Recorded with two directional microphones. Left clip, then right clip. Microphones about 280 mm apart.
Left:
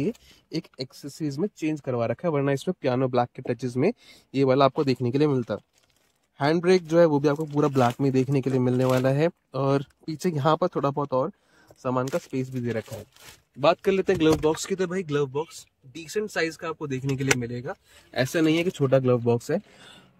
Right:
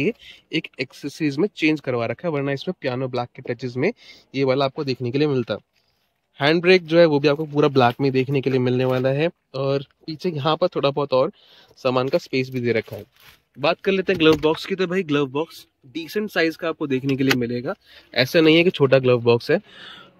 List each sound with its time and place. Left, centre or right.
0.6 s speech: centre
1.5 s speech: centre
11.8 s speech: centre
13.6 s speech: centre